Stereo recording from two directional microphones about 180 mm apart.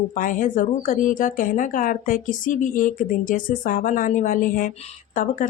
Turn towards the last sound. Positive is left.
turn(degrees=45)  # may be behind; listen again after turning